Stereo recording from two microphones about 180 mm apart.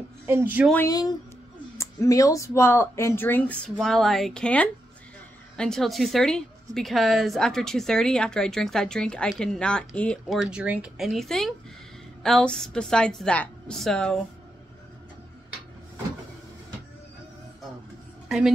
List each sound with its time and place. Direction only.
0.3 s speech: 10° right (ahead or behind)
0.8 s a woman's voice: 20° left (ahead or behind); by 14.2 s 5° left (ahead or behind)